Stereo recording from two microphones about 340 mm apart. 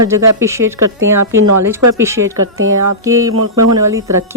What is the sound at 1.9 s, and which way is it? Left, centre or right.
Speech, centre.